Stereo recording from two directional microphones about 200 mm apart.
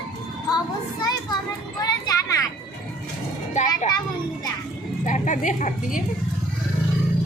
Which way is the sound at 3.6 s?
35° left (ahead or behind).